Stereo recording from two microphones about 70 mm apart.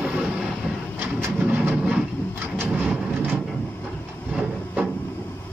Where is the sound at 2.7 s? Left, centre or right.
Centre.